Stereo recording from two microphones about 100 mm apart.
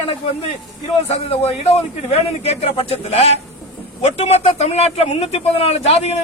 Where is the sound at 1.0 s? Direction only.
80° left.